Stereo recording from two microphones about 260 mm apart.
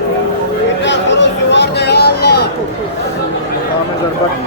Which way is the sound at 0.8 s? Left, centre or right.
Left.